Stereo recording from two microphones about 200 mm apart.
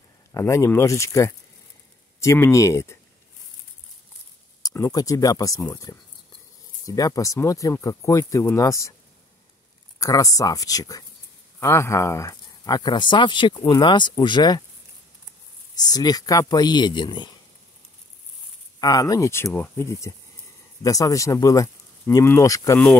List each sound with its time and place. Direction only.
0.3 s speech: 15° left (ahead or behind)
4.6 s speech: 15° left (ahead or behind)
7.0 s speech: 15° left (ahead or behind)
9.9 s speech: 15° left (ahead or behind)
15.8 s speech: 20° left (ahead or behind)
18.8 s speech: 20° left (ahead or behind)